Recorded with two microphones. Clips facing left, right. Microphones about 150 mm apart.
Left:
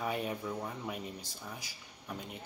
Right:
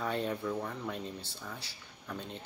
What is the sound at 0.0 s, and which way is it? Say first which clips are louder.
Speech: right 2 dB; 10° left (ahead or behind).